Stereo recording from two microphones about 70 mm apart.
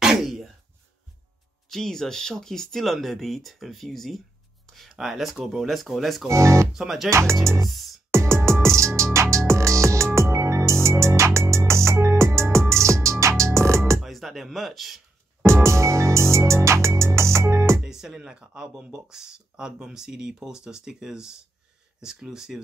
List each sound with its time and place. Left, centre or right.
0.0 s a sound: centre
1.7 s speech: centre
6.2 s speech: right
6.7 s speech: centre
7.1 s speech: right
7.6 s speech: centre
8.1 s music: right
14.0 s speech: centre
15.4 s music: right
17.8 s speech: centre